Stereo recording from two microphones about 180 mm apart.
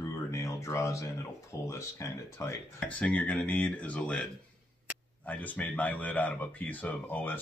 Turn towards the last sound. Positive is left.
turn(degrees=10)  # may be behind; listen again after turning